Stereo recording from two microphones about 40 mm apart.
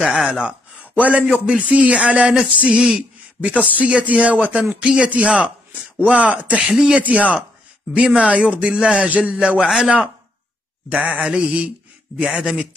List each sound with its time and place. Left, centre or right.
0.0 s speech: centre
0.3 s a man's voice: right
0.9 s a man's voice: right
3.3 s a man's voice: right